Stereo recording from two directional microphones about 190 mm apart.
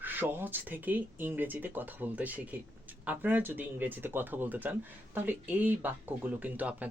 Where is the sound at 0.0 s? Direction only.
10° right (ahead or behind).